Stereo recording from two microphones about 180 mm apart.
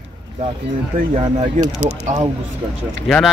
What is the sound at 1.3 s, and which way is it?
Speech, 40° right (ahead or behind).